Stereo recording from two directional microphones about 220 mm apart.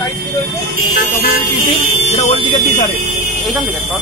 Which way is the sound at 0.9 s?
40° left (ahead or behind).